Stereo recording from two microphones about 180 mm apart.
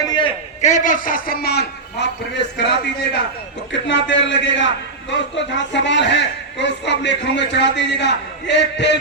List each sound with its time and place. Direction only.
0.0 s a man's voice: 25° left (ahead or behind)
0.6 s a man's voice: 45° left (ahead or behind); by 3.2 s 70° left (ahead or behind)
3.7 s a man's voice: 85° left